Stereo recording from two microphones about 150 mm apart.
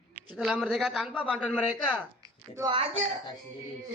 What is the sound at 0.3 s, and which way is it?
A woman's voice, 5° right (ahead or behind).